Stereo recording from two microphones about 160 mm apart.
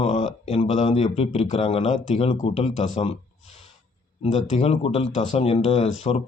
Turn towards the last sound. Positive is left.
turn(degrees=40)  # may be behind; listen again after turning